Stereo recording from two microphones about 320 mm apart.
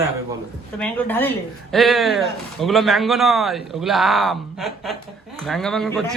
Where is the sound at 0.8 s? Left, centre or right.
Centre.